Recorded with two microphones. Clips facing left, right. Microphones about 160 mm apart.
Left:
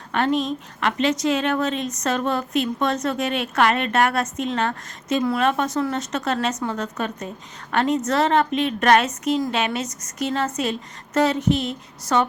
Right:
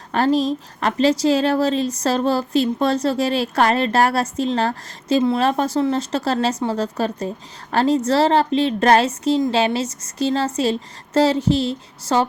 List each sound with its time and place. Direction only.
0.1 s a woman's voice: 35° right (ahead or behind)